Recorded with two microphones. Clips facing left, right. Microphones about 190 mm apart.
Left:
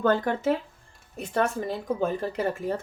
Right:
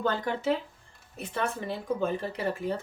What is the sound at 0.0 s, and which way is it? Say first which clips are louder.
Speech: left 5 dB; 50° left (ahead or behind).